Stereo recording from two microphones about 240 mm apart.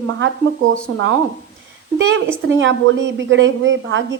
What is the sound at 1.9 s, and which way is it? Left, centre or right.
A woman's voice, right.